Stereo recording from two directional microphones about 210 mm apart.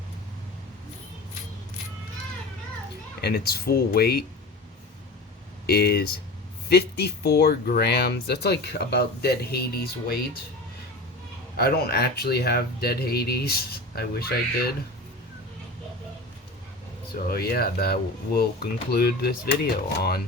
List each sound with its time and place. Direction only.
3.2 s speech: 50° left (ahead or behind)
5.6 s speech: 50° left (ahead or behind)
11.5 s speech: 50° left (ahead or behind)
17.3 s speech: 45° left (ahead or behind)